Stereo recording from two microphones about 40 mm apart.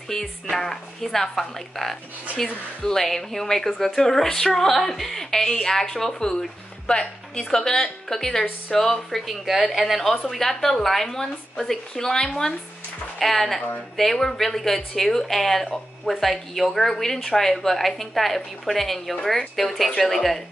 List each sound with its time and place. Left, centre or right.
0.1 s a woman's voice: centre
9.5 s a woman's voice: centre